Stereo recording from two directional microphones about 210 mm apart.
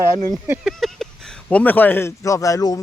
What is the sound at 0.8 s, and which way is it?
Speech, centre (ahead or behind).